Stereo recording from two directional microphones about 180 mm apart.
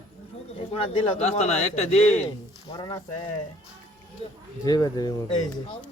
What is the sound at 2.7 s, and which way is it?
Speech, 25° left (ahead or behind).